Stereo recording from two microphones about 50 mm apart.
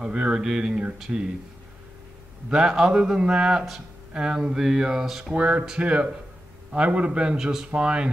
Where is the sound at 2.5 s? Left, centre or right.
Centre.